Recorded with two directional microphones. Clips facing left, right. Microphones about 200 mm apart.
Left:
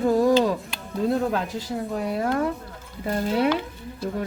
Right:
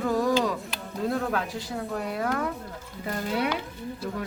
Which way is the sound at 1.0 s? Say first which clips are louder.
Left 4 dB; 25° left (ahead or behind).